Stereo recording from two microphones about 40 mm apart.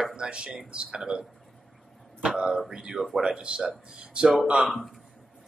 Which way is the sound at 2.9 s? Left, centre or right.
Centre.